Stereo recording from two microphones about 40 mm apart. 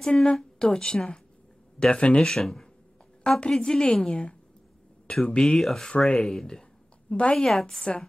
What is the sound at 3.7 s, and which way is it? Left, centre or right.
Speech, centre.